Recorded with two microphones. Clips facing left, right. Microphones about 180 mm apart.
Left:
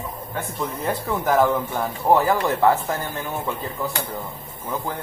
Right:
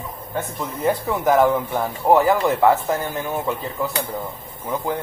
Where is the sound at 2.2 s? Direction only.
20° right (ahead or behind).